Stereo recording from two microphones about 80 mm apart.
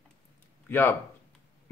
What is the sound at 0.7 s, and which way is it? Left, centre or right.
Speech, left.